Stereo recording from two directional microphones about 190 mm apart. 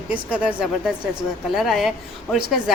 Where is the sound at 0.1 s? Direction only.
5° right (ahead or behind).